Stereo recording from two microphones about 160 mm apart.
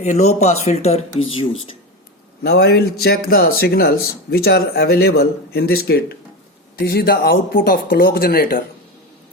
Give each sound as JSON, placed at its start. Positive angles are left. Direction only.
{"t": 0.0, "sound": "speech", "side_deg": 45}
{"t": 2.4, "sound": "speech", "side_deg": 90}